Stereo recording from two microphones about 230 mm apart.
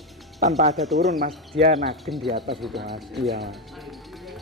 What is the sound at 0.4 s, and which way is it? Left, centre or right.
Speech, right.